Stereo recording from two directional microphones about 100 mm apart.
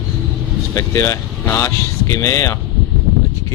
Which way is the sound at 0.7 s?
30° left (ahead or behind).